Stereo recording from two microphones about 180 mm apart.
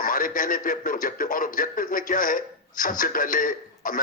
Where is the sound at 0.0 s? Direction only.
50° left (ahead or behind).